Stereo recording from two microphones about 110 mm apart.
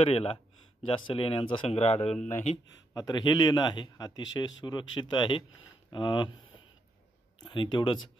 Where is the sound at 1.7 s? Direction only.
70° left (ahead or behind).